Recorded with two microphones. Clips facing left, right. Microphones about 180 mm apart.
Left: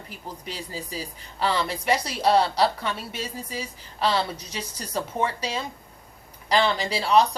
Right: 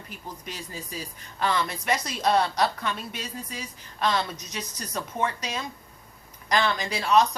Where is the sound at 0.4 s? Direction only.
10° left (ahead or behind).